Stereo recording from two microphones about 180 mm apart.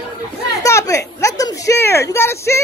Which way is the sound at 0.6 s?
15° left (ahead or behind).